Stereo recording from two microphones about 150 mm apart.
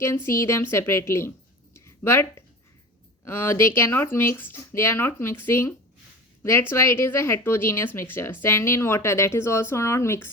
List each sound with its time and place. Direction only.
0.3 s a woman's voice: 20° left (ahead or behind)
1.7 s a sound: 15° left (ahead or behind)
3.2 s a woman's voice: 15° left (ahead or behind)